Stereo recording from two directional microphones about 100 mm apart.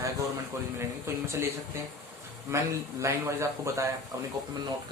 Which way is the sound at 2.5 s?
30° right (ahead or behind).